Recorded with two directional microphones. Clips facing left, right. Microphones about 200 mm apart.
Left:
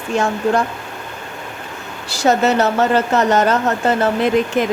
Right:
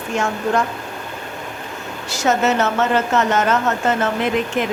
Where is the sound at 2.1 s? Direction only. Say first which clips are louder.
Left 3 dB; 35° left (ahead or behind).